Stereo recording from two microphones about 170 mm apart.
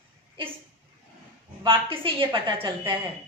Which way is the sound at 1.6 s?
30° right (ahead or behind).